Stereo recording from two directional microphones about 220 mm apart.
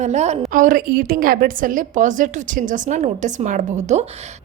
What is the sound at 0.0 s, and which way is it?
A woman's voice, 30° right (ahead or behind).